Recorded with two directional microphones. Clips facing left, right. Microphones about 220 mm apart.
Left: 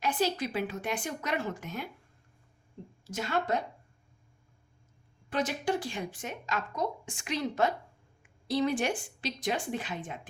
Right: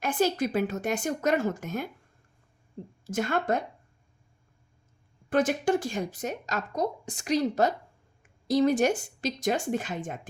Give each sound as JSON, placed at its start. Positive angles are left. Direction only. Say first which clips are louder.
{"t": 0.0, "sound": "a woman's voice", "louder": "right 4 dB", "side_deg": -50}
{"t": 3.0, "sound": "a woman's voice", "louder": "right 4 dB", "side_deg": -50}
{"t": 5.3, "sound": "speech", "louder": "right 6 dB", "side_deg": -50}